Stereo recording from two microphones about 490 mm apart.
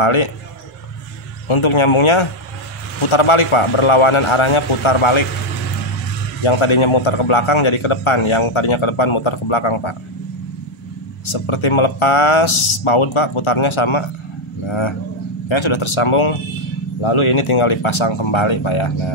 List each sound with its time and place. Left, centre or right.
0.0 s a man's voice: left
1.5 s a man's voice: left
6.4 s a man's voice: left
11.3 s a man's voice: left